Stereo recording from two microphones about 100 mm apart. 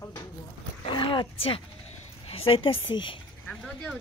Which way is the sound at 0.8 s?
60° left (ahead or behind).